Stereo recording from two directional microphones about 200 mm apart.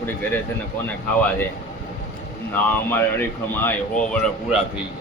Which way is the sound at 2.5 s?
10° left (ahead or behind).